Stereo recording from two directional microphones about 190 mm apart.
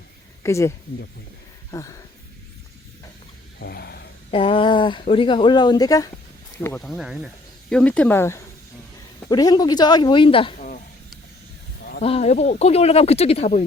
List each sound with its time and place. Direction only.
0.4 s speech: 15° left (ahead or behind)
1.7 s speech: 15° left (ahead or behind)
3.6 s a sound: 55° left (ahead or behind)
4.3 s speech: 30° left (ahead or behind)
6.7 s speech: centre (ahead or behind); by 10.5 s 25° left (ahead or behind)
10.6 s a sound: 45° left (ahead or behind)
11.9 s speech: 35° left (ahead or behind)